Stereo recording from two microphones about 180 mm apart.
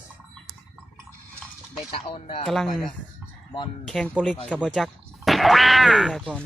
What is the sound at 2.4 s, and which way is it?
Speech, centre (ahead or behind).